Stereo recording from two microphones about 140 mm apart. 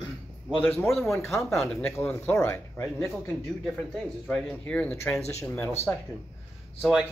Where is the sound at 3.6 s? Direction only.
5° left (ahead or behind).